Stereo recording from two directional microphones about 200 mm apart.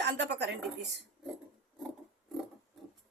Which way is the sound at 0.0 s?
60° right (ahead or behind).